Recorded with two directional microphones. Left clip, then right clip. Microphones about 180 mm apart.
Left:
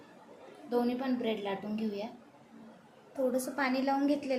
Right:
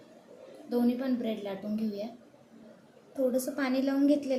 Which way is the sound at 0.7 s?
20° left (ahead or behind).